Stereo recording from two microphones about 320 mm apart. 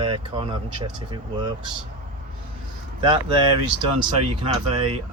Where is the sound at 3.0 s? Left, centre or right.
Centre.